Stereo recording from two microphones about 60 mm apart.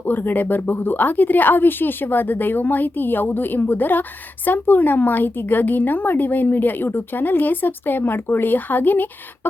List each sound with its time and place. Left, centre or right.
0.0 s a woman's voice: left